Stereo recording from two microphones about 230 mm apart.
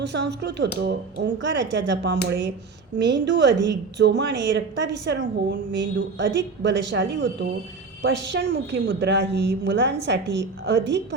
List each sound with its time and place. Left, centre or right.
0.0 s a woman's voice: right